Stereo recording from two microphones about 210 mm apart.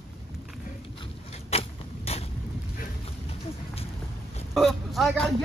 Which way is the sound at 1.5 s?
30° left (ahead or behind).